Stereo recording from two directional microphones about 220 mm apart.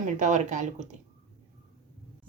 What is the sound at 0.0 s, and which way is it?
Speech, 35° right (ahead or behind).